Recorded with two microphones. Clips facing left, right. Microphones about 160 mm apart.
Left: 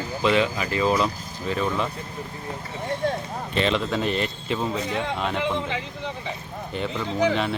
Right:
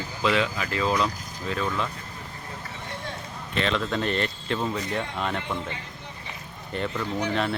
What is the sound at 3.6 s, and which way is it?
Speech, 5° left (ahead or behind).